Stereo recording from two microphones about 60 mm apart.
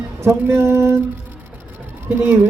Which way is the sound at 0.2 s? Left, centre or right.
Right.